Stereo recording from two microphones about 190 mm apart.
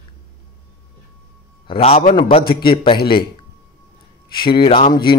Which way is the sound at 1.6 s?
30° left (ahead or behind).